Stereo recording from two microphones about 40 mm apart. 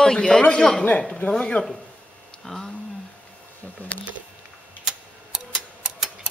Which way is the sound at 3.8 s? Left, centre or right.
Left.